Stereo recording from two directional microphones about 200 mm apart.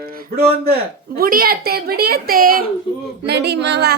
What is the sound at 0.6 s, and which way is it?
A woman's voice, 50° right (ahead or behind).